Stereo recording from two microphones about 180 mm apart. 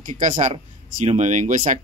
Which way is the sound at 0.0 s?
45° right (ahead or behind).